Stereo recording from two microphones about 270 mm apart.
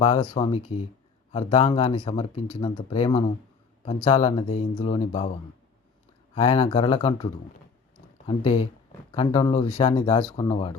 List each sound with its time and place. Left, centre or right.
0.0 s speech: centre
6.3 s speech: centre
8.3 s speech: centre